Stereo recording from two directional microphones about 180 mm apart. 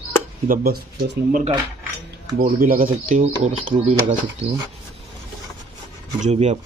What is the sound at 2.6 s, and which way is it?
Speech, 50° right (ahead or behind).